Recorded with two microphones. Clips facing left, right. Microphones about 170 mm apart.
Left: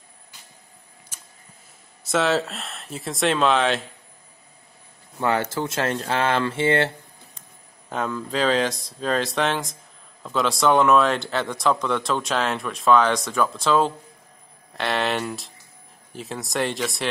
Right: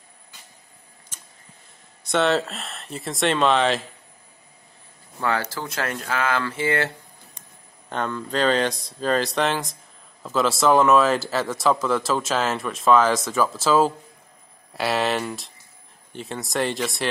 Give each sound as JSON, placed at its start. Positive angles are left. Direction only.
{"t": 1.1, "sound": "a sound", "side_deg": 10}
{"t": 2.0, "sound": "speech", "side_deg": 0}
{"t": 5.2, "sound": "speech", "side_deg": 20}
{"t": 7.9, "sound": "speech", "side_deg": 5}